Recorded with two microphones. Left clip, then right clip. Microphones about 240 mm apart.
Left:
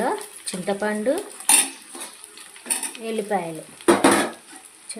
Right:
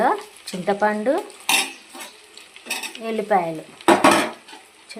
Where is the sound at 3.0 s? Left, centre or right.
Centre.